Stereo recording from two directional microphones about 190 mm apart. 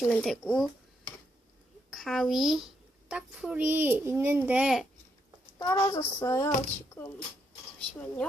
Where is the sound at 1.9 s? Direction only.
Centre (ahead or behind).